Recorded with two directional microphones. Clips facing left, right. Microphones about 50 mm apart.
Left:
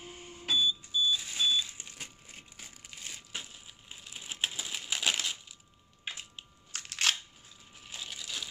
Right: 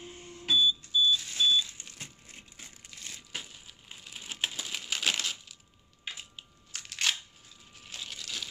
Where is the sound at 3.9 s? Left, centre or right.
Centre.